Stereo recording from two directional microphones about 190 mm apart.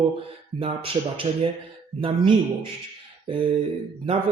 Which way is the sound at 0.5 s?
30° right (ahead or behind).